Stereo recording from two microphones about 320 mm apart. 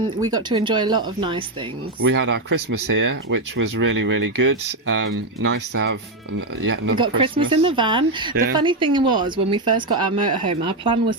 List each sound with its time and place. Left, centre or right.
0.2 s speech: centre
2.0 s speech: right
6.9 s speech: centre